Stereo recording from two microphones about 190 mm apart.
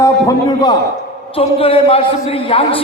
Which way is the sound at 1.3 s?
30° left (ahead or behind).